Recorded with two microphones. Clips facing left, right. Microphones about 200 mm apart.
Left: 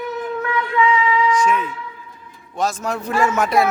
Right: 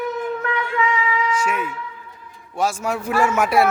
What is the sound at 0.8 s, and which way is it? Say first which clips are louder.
Speech: left 5 dB; 40° right (ahead or behind).